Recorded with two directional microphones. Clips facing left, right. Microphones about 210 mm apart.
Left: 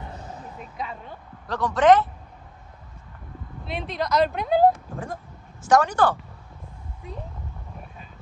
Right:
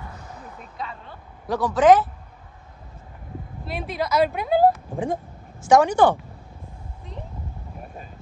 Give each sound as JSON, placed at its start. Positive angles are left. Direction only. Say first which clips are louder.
{"t": 1.5, "sound": "speech", "louder": "right 2 dB", "side_deg": -5}
{"t": 3.6, "sound": "speech", "louder": "right 1 dB", "side_deg": -5}
{"t": 4.9, "sound": "speech", "louder": "right 8 dB", "side_deg": -15}